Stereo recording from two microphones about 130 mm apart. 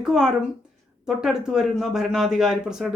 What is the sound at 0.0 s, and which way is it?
Speech, 5° right (ahead or behind).